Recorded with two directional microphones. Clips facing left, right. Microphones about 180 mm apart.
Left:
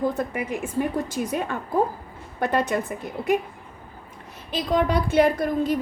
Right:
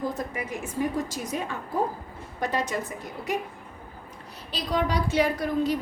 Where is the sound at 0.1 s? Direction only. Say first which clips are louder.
Left 5 dB; 55° left (ahead or behind).